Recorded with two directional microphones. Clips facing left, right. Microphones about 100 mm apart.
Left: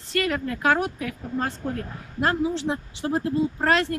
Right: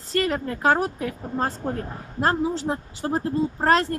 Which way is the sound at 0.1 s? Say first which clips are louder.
Right 1 dB; 35° right (ahead or behind).